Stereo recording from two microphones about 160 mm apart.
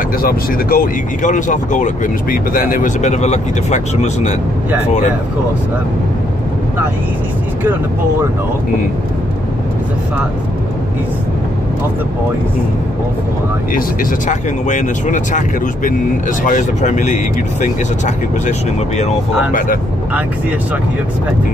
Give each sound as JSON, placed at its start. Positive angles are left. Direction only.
{"t": 0.2, "sound": "speech", "side_deg": 65}
{"t": 13.7, "sound": "speech", "side_deg": 50}